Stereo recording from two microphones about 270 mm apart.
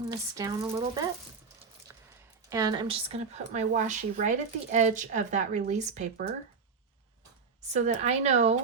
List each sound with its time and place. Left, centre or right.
0.3 s speech: centre
2.5 s speech: centre
7.7 s speech: right